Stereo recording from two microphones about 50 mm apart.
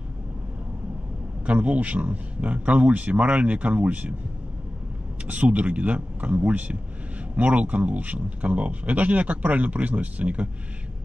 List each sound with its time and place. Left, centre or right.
1.4 s speech: right
5.2 s speech: right